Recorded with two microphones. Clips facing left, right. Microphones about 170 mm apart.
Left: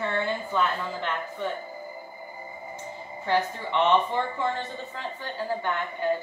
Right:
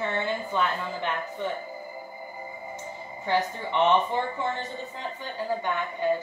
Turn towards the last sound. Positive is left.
turn(degrees=-15)  # may be behind; listen again after turning